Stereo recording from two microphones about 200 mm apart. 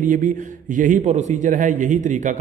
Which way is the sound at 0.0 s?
40° right (ahead or behind).